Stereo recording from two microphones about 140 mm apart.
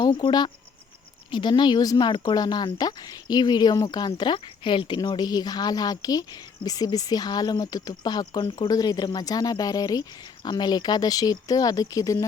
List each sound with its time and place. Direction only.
0.0 s speech: 30° left (ahead or behind)